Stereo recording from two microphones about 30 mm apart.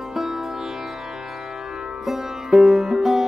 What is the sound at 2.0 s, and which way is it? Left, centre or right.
Music, centre.